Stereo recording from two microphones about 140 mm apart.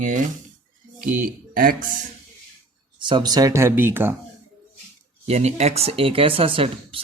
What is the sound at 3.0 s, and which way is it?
Speech, 35° right (ahead or behind).